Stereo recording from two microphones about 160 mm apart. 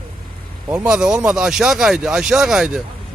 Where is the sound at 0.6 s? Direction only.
5° right (ahead or behind).